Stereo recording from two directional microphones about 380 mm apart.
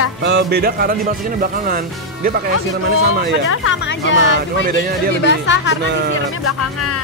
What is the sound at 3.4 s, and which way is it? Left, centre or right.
Speech, left.